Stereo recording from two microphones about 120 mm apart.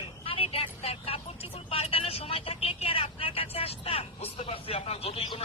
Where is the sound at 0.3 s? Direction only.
50° left (ahead or behind).